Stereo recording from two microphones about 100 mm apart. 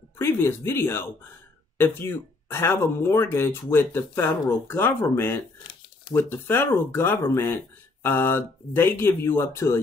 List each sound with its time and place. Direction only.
0.2 s speech: 25° left (ahead or behind)